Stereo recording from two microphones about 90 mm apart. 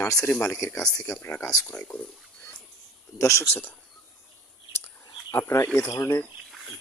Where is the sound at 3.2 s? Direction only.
30° left (ahead or behind).